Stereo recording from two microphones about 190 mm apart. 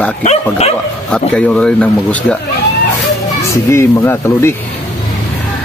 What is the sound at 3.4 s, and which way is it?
Speech, 15° left (ahead or behind).